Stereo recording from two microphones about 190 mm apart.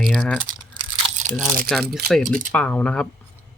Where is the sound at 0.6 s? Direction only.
25° right (ahead or behind).